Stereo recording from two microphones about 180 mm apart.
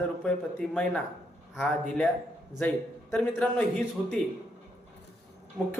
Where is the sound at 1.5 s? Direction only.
5° left (ahead or behind).